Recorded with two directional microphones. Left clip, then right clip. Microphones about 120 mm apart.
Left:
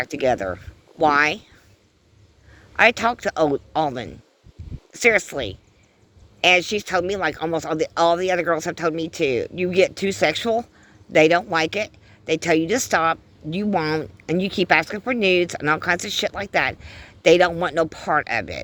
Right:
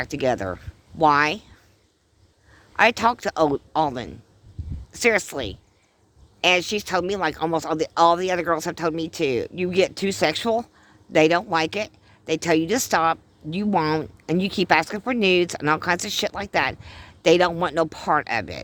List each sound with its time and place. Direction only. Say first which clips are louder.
0.0 s speech: left 2 dB; 35° right (ahead or behind)
2.7 s speech: left 1 dB; 30° right (ahead or behind)
13.7 s speech: right 1 dB; 50° right (ahead or behind); by 18.6 s 35° right (ahead or behind)